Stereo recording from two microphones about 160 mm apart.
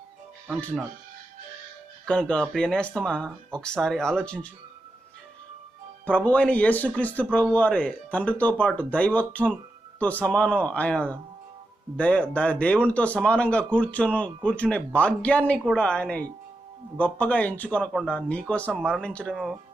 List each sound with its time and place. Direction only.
2.0 s speech: 5° left (ahead or behind)
6.1 s speech: 10° left (ahead or behind)